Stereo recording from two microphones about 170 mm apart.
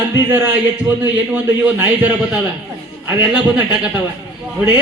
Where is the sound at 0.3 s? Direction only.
10° right (ahead or behind).